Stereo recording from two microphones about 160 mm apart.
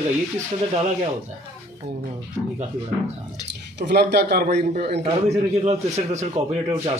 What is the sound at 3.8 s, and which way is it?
Speech, 90° right.